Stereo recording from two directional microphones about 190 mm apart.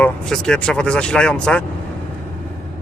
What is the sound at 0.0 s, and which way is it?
Speech, 5° left (ahead or behind).